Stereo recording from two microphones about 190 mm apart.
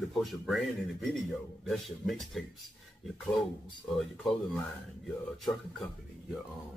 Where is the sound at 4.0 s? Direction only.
Centre (ahead or behind).